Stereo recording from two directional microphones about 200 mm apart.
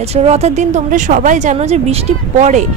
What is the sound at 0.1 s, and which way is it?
A woman's voice, 30° right (ahead or behind).